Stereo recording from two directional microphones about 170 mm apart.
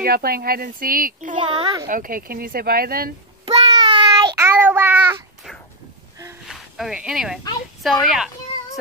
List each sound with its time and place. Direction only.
0.0 s speech: 65° right (ahead or behind)
1.3 s a child's voice: 30° right (ahead or behind)
1.9 s speech: 55° right (ahead or behind)
3.6 s child singing: 25° right (ahead or behind)
4.4 s child singing: 10° right (ahead or behind)
6.4 s a sound: 5° right (ahead or behind)
7.8 s speech: centre (ahead or behind)